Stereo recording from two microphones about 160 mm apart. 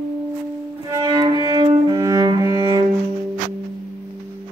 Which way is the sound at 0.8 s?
25° right (ahead or behind).